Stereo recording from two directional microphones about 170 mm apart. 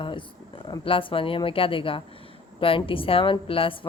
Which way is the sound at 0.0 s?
30° left (ahead or behind).